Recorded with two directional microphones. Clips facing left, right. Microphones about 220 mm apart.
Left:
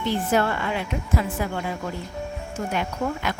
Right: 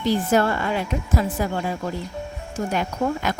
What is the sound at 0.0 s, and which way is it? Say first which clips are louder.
Speech: right 3 dB; 40° right (ahead or behind).